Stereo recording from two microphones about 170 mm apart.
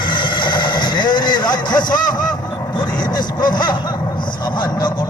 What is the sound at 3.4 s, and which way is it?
Speech, 25° left (ahead or behind).